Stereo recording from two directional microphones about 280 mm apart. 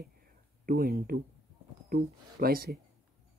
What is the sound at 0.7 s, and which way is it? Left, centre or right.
Speech, right.